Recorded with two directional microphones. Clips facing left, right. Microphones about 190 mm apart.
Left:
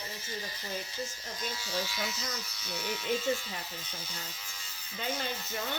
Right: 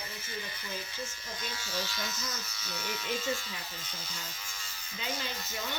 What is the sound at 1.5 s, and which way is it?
Speech, 10° left (ahead or behind).